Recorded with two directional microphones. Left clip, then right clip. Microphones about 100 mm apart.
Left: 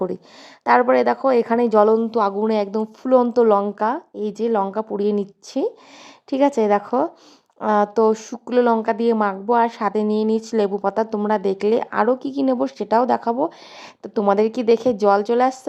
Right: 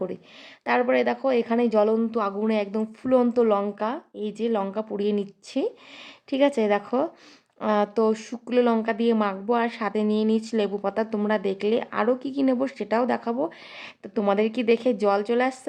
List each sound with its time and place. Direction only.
0.6 s speech: 45° left (ahead or behind)
3.0 s speech: 30° left (ahead or behind)